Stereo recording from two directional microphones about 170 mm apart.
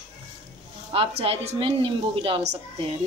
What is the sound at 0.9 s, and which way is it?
A woman's voice, 35° right (ahead or behind).